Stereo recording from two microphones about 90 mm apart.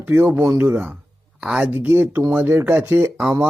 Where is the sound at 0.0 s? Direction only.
20° right (ahead or behind).